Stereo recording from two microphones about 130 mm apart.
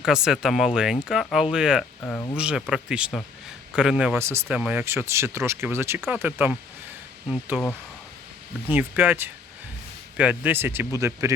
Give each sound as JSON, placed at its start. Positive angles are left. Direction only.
{"t": 0.0, "sound": "speech", "side_deg": -5}
{"t": 4.2, "sound": "speech", "side_deg": -20}
{"t": 4.4, "sound": "speech", "side_deg": -10}
{"t": 8.7, "sound": "speech", "side_deg": -15}